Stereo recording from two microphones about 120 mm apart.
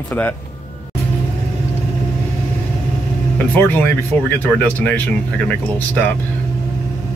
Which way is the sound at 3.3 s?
15° left (ahead or behind).